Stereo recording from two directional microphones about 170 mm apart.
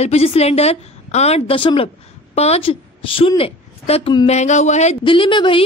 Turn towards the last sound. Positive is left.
turn(degrees=30)  # may be behind; listen again after turning